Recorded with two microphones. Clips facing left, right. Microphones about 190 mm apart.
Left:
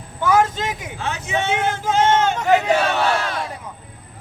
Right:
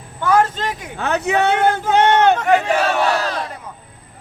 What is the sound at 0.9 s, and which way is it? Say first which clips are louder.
Speech: right 8 dB; 65° right (ahead or behind).